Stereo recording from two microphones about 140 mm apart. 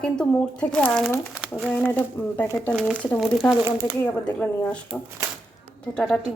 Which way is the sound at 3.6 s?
20° right (ahead or behind).